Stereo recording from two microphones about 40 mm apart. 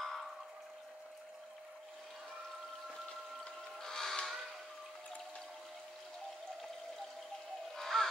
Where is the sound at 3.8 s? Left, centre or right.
Centre.